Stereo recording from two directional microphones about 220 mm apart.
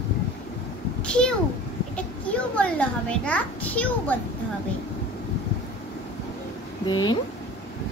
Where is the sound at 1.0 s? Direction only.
5° left (ahead or behind).